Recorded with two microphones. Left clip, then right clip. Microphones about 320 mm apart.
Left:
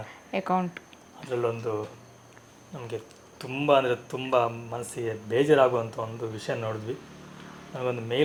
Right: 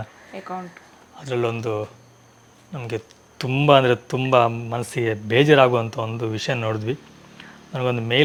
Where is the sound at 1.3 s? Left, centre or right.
Right.